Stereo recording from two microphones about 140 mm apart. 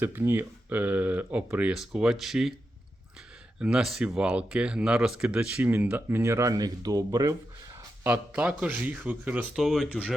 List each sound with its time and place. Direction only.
0.0 s speech: 15° right (ahead or behind)
3.6 s speech: 5° right (ahead or behind); by 7.3 s 25° right (ahead or behind)
8.0 s speech: 10° right (ahead or behind)